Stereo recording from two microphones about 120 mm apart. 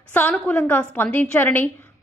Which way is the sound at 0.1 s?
15° left (ahead or behind).